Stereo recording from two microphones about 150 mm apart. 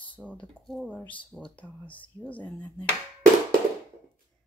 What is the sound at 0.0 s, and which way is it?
Speech, 10° left (ahead or behind).